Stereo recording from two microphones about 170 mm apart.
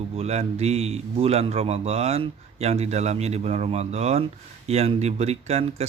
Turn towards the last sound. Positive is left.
turn(degrees=-40)  # may be behind; listen again after turning